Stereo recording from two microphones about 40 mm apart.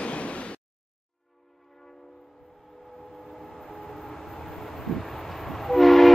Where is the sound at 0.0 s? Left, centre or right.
Left.